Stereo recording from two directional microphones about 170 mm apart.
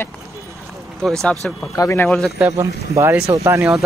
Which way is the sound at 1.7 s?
15° left (ahead or behind).